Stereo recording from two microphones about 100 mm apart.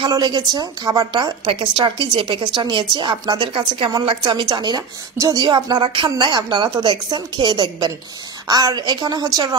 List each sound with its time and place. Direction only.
0.1 s a woman's voice: 40° right (ahead or behind)
1.5 s a woman's voice: 60° right (ahead or behind); by 9.6 s 40° right (ahead or behind)